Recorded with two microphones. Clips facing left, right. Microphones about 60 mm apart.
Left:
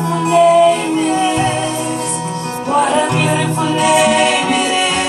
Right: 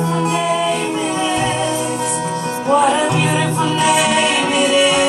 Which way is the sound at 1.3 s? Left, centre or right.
Centre.